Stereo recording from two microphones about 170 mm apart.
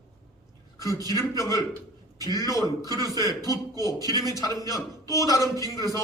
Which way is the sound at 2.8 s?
25° right (ahead or behind).